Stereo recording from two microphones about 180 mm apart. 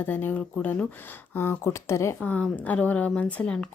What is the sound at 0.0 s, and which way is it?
Speech, 10° left (ahead or behind).